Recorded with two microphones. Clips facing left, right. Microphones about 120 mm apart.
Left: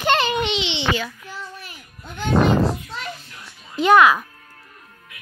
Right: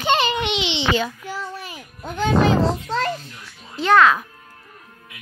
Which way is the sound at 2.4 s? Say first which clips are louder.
Right 1 dB; 90° right.